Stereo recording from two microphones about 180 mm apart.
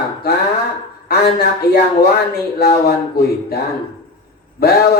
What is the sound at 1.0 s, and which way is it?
Speech, 60° left (ahead or behind).